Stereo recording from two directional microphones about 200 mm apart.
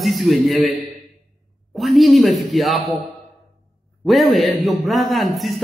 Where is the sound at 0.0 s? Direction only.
Centre (ahead or behind).